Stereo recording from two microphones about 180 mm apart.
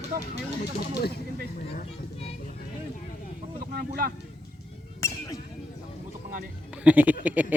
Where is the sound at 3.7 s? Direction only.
55° right (ahead or behind).